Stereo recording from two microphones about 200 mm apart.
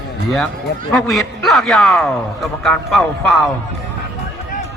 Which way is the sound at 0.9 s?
Centre (ahead or behind).